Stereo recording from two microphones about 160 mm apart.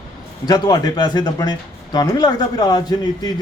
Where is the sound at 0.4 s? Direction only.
25° left (ahead or behind).